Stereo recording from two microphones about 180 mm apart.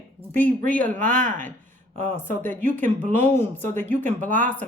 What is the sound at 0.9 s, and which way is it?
Speech, 45° right (ahead or behind).